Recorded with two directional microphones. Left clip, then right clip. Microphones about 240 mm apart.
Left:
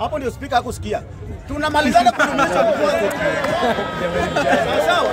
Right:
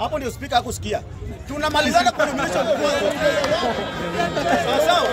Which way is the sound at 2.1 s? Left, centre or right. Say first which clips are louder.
Left 4 dB; left.